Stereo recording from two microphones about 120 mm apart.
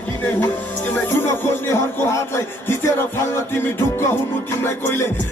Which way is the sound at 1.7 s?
20° left (ahead or behind).